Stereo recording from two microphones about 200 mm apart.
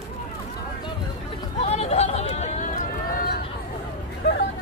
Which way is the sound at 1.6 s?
30° left (ahead or behind).